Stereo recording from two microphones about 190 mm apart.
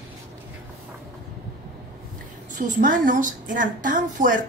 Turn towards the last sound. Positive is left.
turn(degrees=-45)  # may be behind; listen again after turning